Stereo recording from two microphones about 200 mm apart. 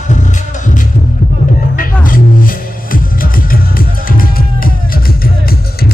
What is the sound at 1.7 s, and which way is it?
Music, 45° left (ahead or behind).